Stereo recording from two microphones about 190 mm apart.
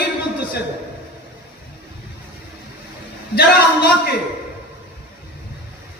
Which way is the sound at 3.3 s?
55° left (ahead or behind).